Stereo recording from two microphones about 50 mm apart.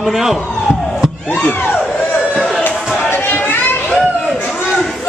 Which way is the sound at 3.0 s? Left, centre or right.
Left.